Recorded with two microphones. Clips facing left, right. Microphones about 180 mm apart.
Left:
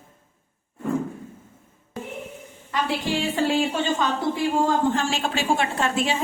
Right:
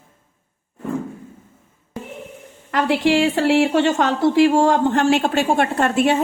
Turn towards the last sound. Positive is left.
turn(degrees=-60)  # may be behind; listen again after turning